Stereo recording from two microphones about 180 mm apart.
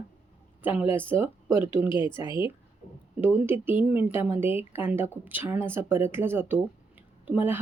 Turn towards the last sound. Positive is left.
turn(degrees=-10)  # may be behind; listen again after turning